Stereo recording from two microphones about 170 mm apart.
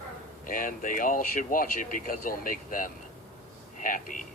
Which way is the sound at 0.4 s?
50° left (ahead or behind).